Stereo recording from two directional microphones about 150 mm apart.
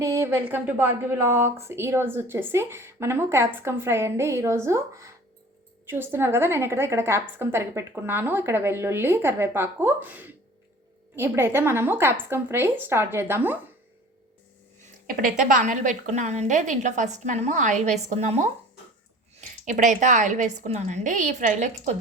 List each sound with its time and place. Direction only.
0.0 s a woman's voice: 20° right (ahead or behind)
15.0 s a woman's voice: 65° right (ahead or behind); by 21.9 s 50° right (ahead or behind)